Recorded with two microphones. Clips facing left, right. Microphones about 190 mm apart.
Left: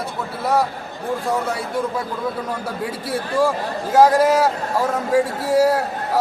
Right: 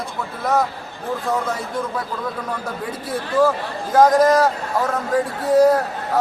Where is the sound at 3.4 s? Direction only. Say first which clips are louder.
Right 2 dB; 10° left (ahead or behind).